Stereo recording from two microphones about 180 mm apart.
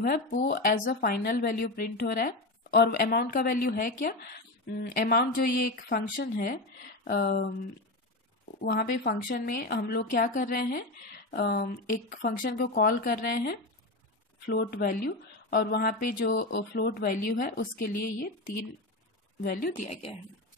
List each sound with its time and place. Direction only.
0.0 s a woman's voice: 50° left (ahead or behind)
8.5 s a woman's voice: 60° left (ahead or behind)
19.4 s speech: 55° left (ahead or behind)